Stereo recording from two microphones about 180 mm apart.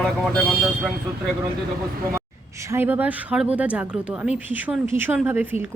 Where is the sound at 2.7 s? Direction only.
10° right (ahead or behind).